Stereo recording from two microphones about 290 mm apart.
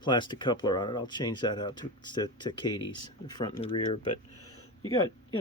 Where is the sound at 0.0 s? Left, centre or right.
Centre.